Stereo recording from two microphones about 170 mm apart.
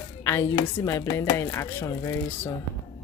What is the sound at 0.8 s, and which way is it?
Speech, 15° left (ahead or behind).